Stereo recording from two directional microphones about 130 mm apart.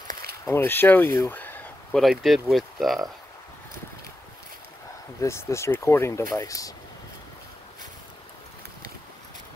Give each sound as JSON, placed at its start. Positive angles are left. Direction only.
{"t": 0.5, "sound": "speech", "side_deg": 20}
{"t": 2.0, "sound": "speech", "side_deg": 0}
{"t": 5.2, "sound": "speech", "side_deg": 20}